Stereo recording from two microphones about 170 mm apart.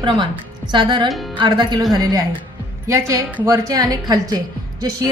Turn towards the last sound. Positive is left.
turn(degrees=-25)  # may be behind; listen again after turning